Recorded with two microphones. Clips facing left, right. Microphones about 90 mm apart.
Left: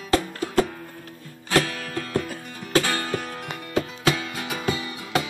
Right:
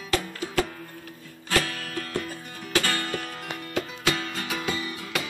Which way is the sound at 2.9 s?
15° left (ahead or behind).